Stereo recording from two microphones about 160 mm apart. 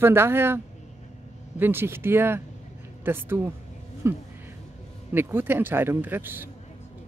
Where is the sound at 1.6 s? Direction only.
15° right (ahead or behind).